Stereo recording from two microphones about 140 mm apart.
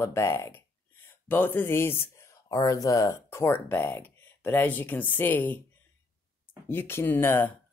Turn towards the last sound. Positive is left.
turn(degrees=15)  # may be behind; listen again after turning